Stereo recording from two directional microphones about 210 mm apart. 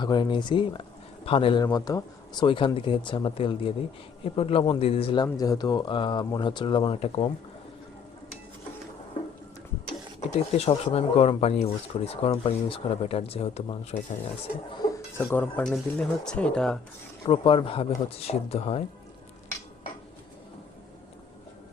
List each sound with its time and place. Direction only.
0.0 s speech: 20° left (ahead or behind)
10.2 s speech: 30° left (ahead or behind)
15.2 s speech: 10° left (ahead or behind)
17.2 s speech: 25° left (ahead or behind)